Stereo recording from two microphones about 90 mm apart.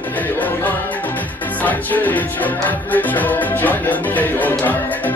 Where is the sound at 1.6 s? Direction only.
20° left (ahead or behind).